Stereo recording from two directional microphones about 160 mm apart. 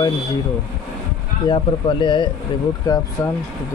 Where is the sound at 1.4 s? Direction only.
30° left (ahead or behind).